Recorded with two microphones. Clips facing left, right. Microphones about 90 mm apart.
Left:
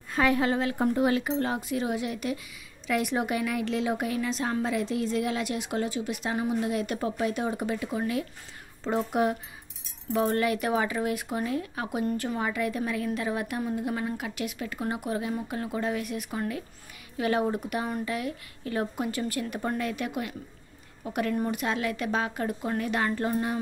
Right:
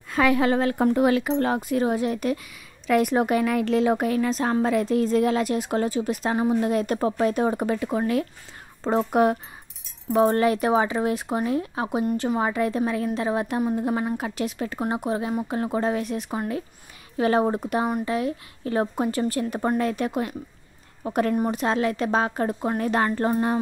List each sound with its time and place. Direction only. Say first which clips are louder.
0.1 s a woman's voice: right 4 dB; 90° right; by 1.6 s 70° right (ahead or behind)
1.6 s a woman's voice: right 6 dB; 45° right (ahead or behind)
10.1 s a woman's voice: right 6 dB; 35° right (ahead or behind)